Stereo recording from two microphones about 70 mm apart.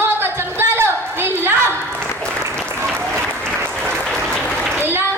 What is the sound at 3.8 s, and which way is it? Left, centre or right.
Applause, centre.